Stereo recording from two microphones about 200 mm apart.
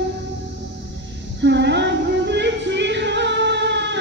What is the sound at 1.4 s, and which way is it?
Music, 60° right (ahead or behind).